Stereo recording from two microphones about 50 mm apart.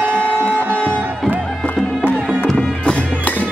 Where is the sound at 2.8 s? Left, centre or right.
Left.